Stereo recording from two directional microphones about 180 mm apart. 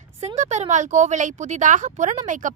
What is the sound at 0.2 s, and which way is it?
A woman's voice, 40° right (ahead or behind).